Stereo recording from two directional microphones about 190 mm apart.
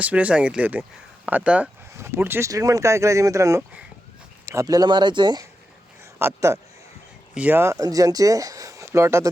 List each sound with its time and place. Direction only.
0.0 s speech: 5° right (ahead or behind)